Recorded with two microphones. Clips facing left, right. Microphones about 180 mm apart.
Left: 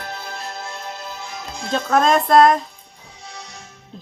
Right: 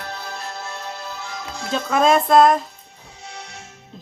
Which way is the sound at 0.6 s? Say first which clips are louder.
Even; 15° left (ahead or behind).